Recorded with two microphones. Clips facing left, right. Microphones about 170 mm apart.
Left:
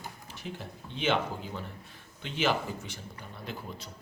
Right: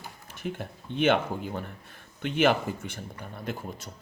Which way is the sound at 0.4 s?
55° right (ahead or behind).